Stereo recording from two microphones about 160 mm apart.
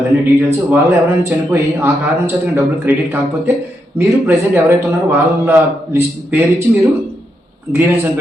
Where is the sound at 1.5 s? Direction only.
15° right (ahead or behind).